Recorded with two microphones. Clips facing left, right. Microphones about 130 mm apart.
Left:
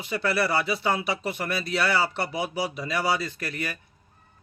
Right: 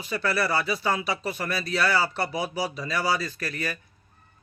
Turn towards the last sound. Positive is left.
turn(degrees=20)  # may be behind; listen again after turning